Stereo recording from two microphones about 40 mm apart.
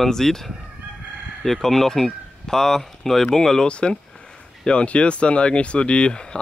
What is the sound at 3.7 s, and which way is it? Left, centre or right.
Speech, left.